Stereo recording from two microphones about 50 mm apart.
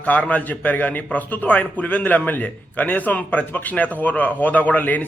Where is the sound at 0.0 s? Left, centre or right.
Left.